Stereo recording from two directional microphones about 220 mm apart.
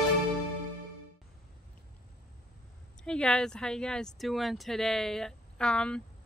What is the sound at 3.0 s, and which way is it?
Speech, 5° left (ahead or behind).